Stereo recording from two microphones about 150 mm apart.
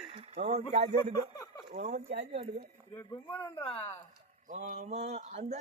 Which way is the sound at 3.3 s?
10° left (ahead or behind).